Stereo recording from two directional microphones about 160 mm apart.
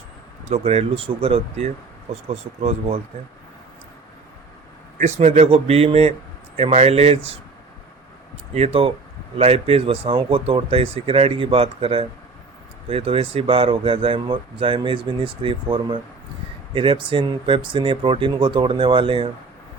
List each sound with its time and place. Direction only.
0.4 s speech: 40° right (ahead or behind)
4.9 s speech: 45° right (ahead or behind)
8.5 s speech: 40° right (ahead or behind)